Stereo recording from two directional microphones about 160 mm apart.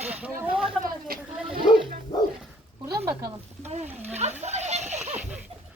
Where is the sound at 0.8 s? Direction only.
65° right (ahead or behind).